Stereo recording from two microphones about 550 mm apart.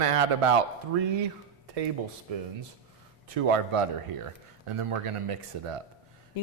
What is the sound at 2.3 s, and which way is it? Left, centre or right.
Speech, right.